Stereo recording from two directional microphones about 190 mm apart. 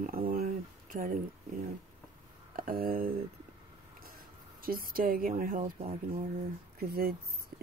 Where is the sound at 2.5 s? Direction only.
45° right (ahead or behind).